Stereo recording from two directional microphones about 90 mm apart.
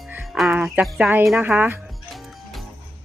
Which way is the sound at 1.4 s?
20° right (ahead or behind).